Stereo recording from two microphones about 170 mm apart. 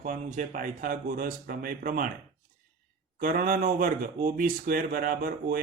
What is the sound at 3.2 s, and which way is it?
Speech, 50° right (ahead or behind).